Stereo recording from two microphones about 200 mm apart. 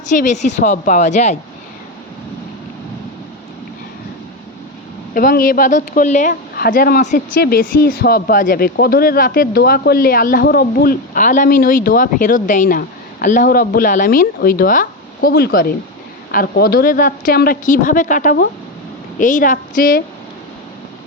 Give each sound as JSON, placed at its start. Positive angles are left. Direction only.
{"t": 0.1, "sound": "a woman's voice", "side_deg": 40}
{"t": 5.1, "sound": "a woman's voice", "side_deg": 45}